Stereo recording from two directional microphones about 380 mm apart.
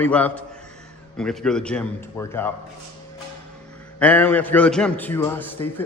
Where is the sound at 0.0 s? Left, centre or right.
Centre.